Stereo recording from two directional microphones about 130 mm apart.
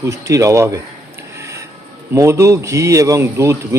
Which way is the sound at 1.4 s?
25° right (ahead or behind).